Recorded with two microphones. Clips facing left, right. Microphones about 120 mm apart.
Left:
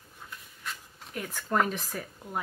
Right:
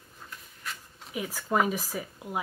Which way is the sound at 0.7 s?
5° right (ahead or behind).